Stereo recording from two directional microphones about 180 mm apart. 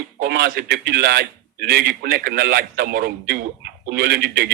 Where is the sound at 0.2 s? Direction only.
60° right (ahead or behind).